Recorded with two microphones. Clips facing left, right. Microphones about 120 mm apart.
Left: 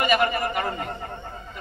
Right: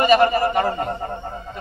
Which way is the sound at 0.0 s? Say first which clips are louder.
Right 7 dB; 30° right (ahead or behind).